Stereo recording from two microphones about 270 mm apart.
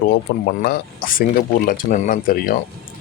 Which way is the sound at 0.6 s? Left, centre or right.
Left.